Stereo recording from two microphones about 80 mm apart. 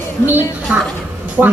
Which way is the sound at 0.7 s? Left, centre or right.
Centre.